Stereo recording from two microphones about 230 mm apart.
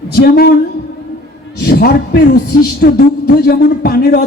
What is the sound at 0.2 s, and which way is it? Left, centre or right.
Speech, left.